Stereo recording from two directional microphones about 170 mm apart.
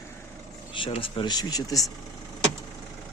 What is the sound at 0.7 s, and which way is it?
Speech, 30° left (ahead or behind).